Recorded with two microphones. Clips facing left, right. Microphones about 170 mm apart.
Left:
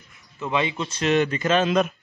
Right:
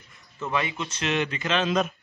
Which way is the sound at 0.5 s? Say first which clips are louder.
Left 4 dB; 25° left (ahead or behind).